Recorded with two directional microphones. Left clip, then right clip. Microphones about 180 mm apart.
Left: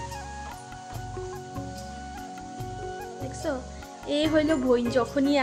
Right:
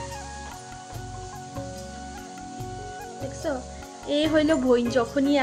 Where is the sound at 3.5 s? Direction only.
Centre (ahead or behind).